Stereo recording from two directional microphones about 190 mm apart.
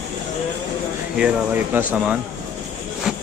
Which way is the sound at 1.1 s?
5° right (ahead or behind).